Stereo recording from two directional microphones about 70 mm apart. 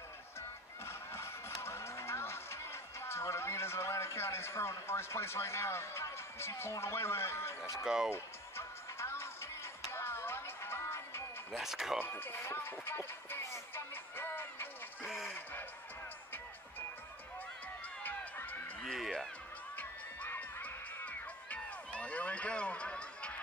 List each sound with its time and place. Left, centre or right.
0.8 s music: left
7.8 s speech: centre
8.1 s music: left
11.5 s speech: centre
12.0 s speech: left
15.2 s a sound: left
18.0 s run: left
18.9 s speech: centre
19.8 s music: left